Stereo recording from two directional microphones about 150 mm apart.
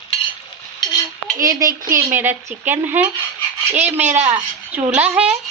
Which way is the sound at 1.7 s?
70° right (ahead or behind).